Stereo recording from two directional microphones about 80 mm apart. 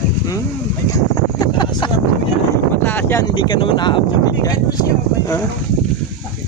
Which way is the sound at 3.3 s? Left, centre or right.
Left.